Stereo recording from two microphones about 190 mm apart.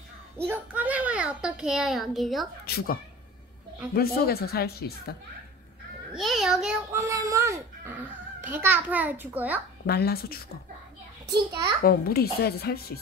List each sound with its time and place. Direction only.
0.4 s a child's voice: 10° right (ahead or behind)
2.6 s a woman's voice: 55° left (ahead or behind)
6.1 s a child's voice: centre (ahead or behind)
7.0 s fowl: 15° right (ahead or behind)
8.4 s a child's voice: 10° right (ahead or behind)
9.8 s a woman's voice: 55° left (ahead or behind)
11.8 s a woman's voice: 50° left (ahead or behind)